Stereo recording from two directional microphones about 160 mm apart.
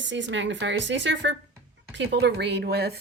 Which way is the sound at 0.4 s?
90° right.